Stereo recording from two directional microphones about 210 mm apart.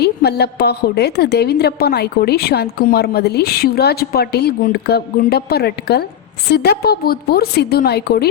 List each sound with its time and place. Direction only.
0.0 s a woman's voice: 50° left (ahead or behind)